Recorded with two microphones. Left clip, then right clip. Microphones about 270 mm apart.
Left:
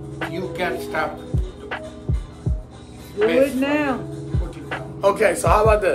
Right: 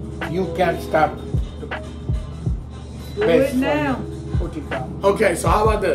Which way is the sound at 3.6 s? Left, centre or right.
Left.